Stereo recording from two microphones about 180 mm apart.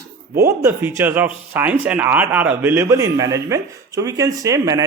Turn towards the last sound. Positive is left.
turn(degrees=-20)  # may be behind; listen again after turning